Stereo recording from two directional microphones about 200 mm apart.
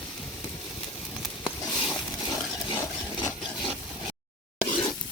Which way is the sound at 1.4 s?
Centre (ahead or behind).